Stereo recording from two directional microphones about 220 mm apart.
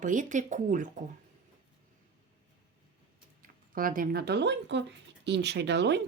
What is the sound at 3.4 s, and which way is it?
Speech, 40° right (ahead or behind).